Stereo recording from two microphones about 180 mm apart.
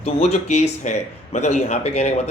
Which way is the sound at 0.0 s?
35° left (ahead or behind).